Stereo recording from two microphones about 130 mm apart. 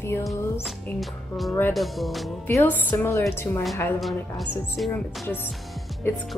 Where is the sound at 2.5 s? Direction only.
15° left (ahead or behind).